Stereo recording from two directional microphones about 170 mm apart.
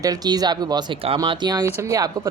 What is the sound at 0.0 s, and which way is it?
Speech, 20° right (ahead or behind).